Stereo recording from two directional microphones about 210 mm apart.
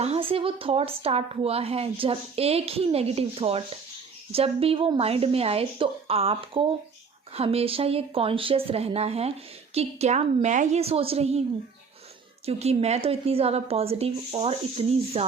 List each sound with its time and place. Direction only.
0.0 s speech: 30° right (ahead or behind)
12.5 s speech: 30° right (ahead or behind)